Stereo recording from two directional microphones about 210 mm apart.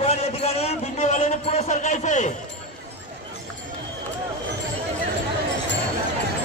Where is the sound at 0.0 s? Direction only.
30° left (ahead or behind).